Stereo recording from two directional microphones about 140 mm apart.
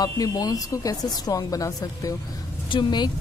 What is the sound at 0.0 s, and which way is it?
A woman's voice, 25° left (ahead or behind).